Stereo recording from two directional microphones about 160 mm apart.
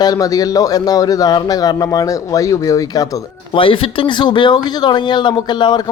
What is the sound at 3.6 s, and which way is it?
Speech, 35° left (ahead or behind).